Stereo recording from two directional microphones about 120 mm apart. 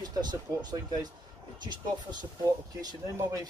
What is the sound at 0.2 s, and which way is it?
Speech, 35° right (ahead or behind).